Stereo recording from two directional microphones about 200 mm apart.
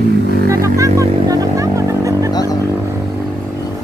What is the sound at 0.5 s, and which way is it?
Music, 15° right (ahead or behind).